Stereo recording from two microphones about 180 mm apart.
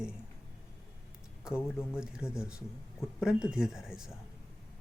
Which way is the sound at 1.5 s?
5° right (ahead or behind).